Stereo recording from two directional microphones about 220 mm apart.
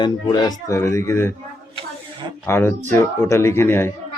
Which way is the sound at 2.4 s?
10° left (ahead or behind).